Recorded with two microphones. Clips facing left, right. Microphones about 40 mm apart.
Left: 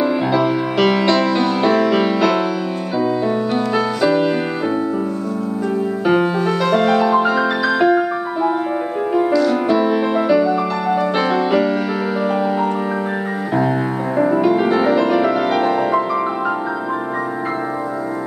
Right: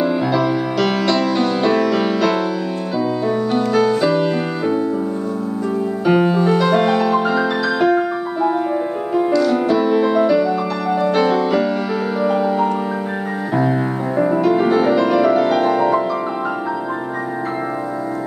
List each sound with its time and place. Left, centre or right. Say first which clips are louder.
0.3 s music: left 1 dB; left
3.5 s music: right 2 dB; centre
6.6 s music: even; centre
7.1 s music: left 1 dB; centre